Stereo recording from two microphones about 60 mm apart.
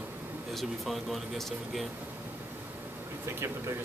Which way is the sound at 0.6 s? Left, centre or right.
Centre.